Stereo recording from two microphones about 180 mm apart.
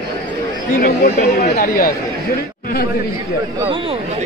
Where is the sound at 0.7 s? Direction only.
55° left (ahead or behind).